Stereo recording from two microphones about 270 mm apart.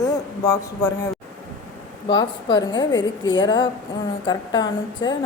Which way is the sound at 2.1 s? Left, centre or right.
Centre.